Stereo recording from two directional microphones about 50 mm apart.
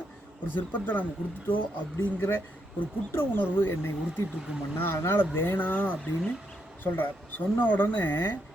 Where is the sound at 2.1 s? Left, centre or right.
Left.